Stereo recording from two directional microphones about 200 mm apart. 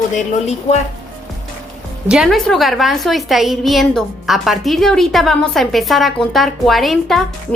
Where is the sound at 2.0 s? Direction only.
5° right (ahead or behind).